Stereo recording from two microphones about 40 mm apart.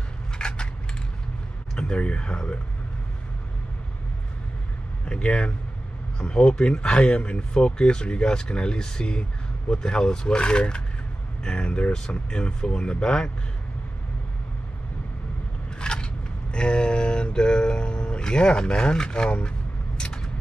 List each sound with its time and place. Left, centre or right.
0.4 s coin: left
1.8 s speech: left
5.0 s speech: left
15.8 s biting: left
16.5 s speech: left
20.0 s vehicle: left